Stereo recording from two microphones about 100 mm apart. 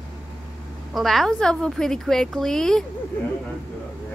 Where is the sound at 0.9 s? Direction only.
Centre (ahead or behind).